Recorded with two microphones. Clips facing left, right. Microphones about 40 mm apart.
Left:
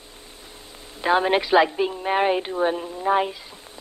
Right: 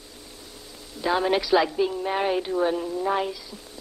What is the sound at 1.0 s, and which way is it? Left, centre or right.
A woman's voice, left.